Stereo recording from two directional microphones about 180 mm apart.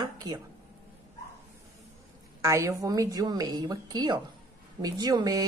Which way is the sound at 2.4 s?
15° right (ahead or behind).